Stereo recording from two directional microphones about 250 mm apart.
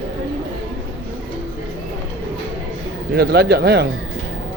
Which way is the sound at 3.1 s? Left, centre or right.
Right.